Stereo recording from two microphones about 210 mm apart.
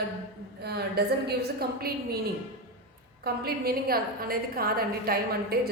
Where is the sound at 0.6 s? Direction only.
50° right (ahead or behind).